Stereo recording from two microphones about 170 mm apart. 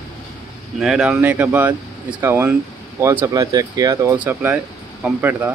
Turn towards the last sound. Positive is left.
turn(degrees=-10)  # may be behind; listen again after turning